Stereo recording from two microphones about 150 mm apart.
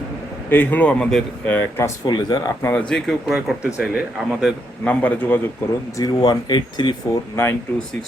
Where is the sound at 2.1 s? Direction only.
25° left (ahead or behind).